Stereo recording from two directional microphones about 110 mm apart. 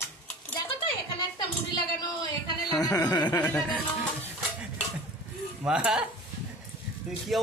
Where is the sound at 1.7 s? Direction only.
40° left (ahead or behind).